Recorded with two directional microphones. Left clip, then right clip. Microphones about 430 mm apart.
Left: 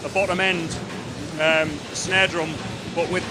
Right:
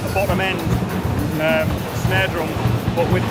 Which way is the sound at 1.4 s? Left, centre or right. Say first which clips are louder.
Even; left.